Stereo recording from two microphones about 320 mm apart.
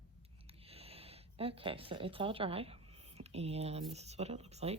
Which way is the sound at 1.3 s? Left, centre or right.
Centre.